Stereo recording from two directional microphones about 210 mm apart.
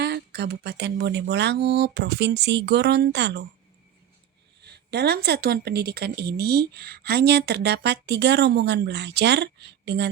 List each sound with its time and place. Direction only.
0.0 s a woman's voice: 50° right (ahead or behind)
4.6 s a woman's voice: 50° right (ahead or behind)